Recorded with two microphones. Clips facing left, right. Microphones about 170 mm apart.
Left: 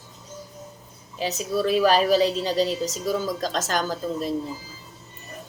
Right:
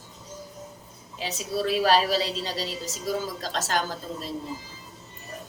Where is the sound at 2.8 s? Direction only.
45° left (ahead or behind).